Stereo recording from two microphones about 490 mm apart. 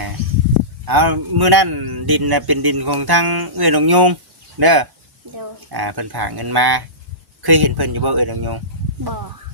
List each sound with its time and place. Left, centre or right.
0.9 s a man's voice: right